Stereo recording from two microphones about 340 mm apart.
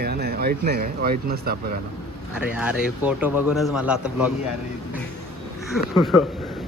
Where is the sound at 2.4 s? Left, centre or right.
Centre.